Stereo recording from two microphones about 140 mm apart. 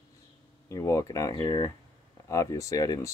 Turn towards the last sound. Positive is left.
turn(degrees=25)  # may be behind; listen again after turning